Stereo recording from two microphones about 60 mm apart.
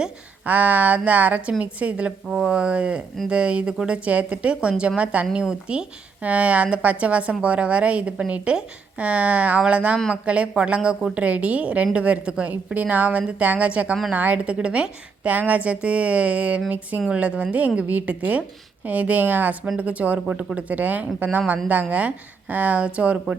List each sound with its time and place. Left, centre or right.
0.4 s a woman's voice: right
2.3 s a woman's voice: centre